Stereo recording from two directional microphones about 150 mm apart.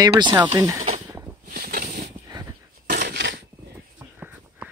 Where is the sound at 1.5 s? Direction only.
90° right.